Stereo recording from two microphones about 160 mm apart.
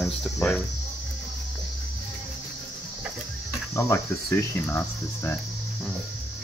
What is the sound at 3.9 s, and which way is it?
Speech, 15° left (ahead or behind).